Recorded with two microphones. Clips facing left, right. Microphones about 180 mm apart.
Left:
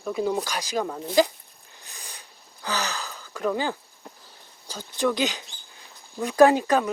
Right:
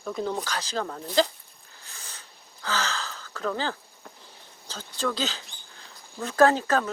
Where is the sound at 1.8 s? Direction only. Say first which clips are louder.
Left 2 dB; 15° left (ahead or behind).